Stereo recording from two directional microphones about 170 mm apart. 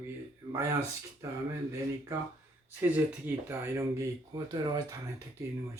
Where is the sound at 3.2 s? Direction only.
15° right (ahead or behind).